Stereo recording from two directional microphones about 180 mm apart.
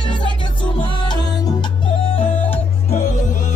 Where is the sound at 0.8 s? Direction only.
25° left (ahead or behind).